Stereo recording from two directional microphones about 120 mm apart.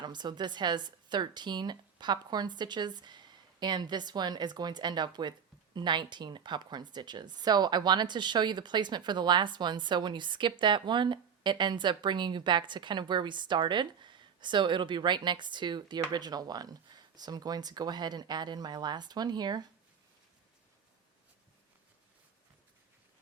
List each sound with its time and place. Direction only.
0.0 s speech: 35° right (ahead or behind)